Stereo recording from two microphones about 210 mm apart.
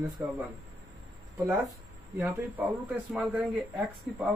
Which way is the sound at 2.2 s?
5° right (ahead or behind).